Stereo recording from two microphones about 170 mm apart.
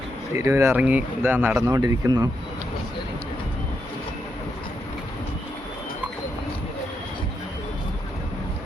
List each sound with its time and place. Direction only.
0.3 s speech: 15° right (ahead or behind)